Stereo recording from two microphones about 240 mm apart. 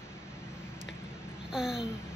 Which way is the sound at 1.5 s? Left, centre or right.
Centre.